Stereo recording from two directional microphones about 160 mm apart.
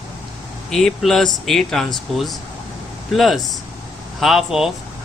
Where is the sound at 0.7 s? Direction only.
Centre (ahead or behind).